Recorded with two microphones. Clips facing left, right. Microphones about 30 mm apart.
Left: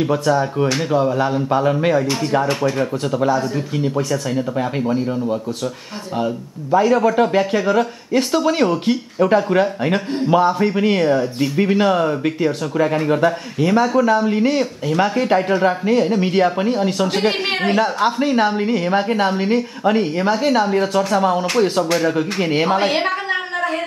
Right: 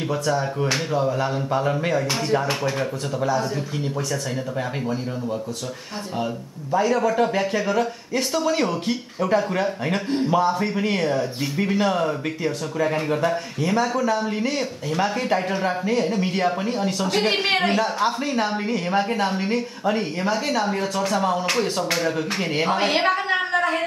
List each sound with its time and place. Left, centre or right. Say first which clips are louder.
0.9 s speech: left 7 dB; left
2.4 s a woman's voice: left 5 dB; centre
6.8 s speech: left 5 dB; left
11.1 s speech: left 6 dB; centre
11.5 s speech: left 5 dB; left
15.6 s speech: left 6 dB; left
17.1 s a woman's voice: left 2 dB; centre
17.7 s speech: left 5 dB; left
22.8 s a woman's voice: left 2 dB; centre